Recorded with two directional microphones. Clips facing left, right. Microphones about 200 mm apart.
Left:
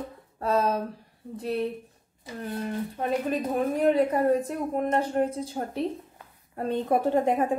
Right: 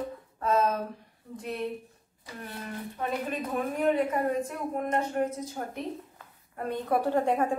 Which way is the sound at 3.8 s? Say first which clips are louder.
Left 4 dB; 35° left (ahead or behind).